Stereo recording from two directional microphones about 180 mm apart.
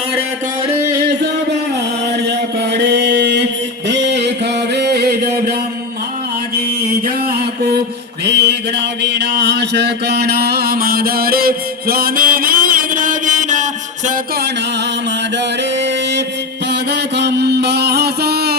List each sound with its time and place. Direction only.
2.7 s mantra: 70° right (ahead or behind)
3.8 s a sound: 70° right (ahead or behind)
7.3 s mantra: 60° right (ahead or behind); by 13.7 s 45° right (ahead or behind)
16.9 s mantra: 70° right (ahead or behind)